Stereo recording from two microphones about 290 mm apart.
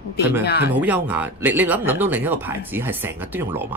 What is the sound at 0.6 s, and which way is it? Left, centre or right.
Speech, centre.